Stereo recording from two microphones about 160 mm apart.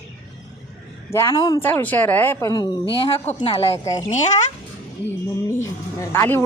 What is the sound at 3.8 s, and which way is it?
Speech, 20° left (ahead or behind).